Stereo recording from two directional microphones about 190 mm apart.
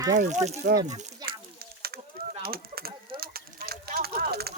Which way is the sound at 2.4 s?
55° right (ahead or behind).